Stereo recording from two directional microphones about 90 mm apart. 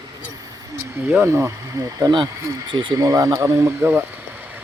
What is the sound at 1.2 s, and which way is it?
Speech, 30° right (ahead or behind).